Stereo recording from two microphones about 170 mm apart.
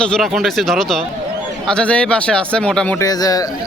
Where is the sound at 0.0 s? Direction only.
5° left (ahead or behind).